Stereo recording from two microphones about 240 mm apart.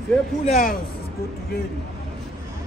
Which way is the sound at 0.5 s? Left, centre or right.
Left.